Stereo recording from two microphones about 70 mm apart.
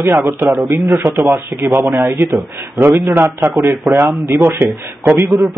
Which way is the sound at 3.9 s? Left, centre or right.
Centre.